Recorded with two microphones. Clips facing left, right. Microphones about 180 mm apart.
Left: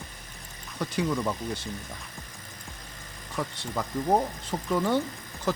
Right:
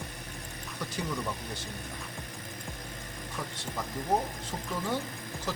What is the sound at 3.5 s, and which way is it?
Speech, 65° left (ahead or behind).